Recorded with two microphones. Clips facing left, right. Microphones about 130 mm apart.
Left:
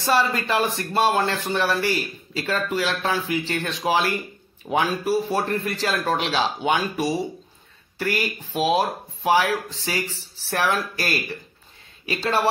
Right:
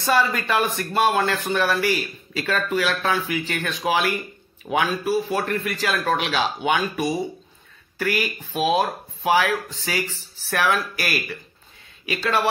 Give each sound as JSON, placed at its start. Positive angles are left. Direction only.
{"t": 0.0, "sound": "speech", "side_deg": 30}
{"t": 5.3, "sound": "speech", "side_deg": 30}